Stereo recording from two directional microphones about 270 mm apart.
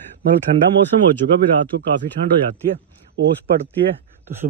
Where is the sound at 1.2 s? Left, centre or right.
Right.